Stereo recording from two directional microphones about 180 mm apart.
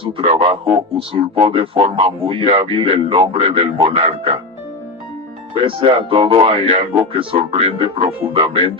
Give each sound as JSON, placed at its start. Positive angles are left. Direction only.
{"t": 0.0, "sound": "speech", "side_deg": -30}
{"t": 5.5, "sound": "speech", "side_deg": -30}